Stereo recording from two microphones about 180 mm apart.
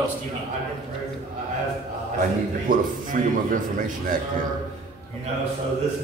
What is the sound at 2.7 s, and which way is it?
Speech, 50° right (ahead or behind).